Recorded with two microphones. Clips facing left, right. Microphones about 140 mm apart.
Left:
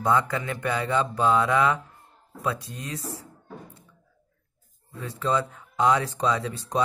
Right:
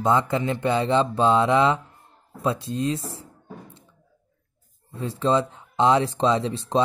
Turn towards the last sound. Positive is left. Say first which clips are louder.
# right 4 dB
turn(degrees=-25)  # may be behind; listen again after turning